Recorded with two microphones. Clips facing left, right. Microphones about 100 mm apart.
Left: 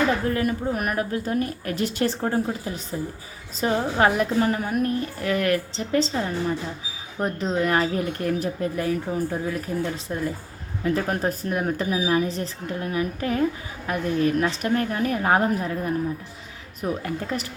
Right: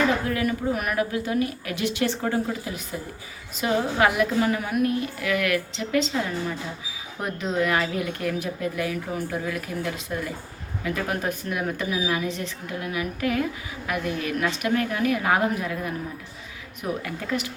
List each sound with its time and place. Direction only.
0.3 s speech: 40° left (ahead or behind)
17.0 s speech: 40° left (ahead or behind)